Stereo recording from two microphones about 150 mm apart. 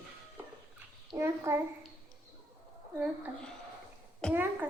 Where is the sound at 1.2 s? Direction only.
15° right (ahead or behind).